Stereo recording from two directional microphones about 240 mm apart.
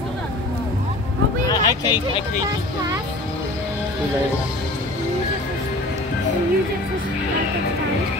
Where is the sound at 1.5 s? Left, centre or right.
Centre.